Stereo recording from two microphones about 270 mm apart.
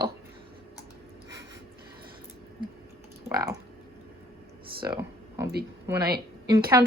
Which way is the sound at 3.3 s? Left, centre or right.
Centre.